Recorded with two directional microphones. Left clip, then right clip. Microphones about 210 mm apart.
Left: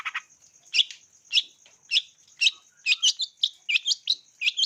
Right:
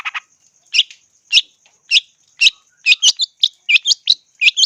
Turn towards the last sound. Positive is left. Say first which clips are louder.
# right 13 dB
turn(degrees=-25)  # may be behind; listen again after turning